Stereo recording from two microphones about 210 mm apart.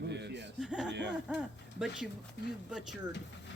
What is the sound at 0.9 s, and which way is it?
Speech, 55° right (ahead or behind).